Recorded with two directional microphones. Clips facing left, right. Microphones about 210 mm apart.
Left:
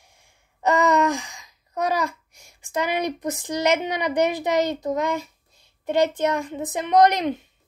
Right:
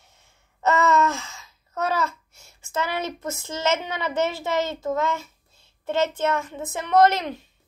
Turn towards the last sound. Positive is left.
turn(degrees=20)  # may be behind; listen again after turning